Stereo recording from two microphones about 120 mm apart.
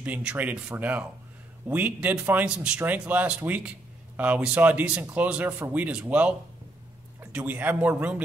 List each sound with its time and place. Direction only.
0.0 s speech: 10° right (ahead or behind)